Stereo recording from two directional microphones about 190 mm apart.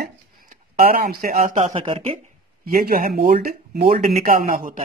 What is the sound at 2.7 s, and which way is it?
A man's voice, 50° right (ahead or behind).